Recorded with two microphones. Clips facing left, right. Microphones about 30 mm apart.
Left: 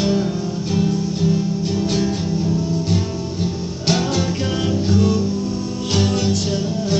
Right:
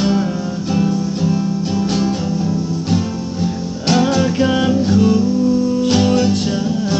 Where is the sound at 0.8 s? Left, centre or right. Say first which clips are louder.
Right 2 dB; centre.